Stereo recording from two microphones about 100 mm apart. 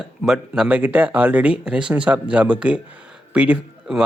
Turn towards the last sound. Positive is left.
turn(degrees=-10)  # may be behind; listen again after turning